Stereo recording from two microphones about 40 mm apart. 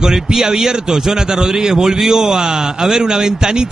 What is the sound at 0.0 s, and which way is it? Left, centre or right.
A man's voice, centre.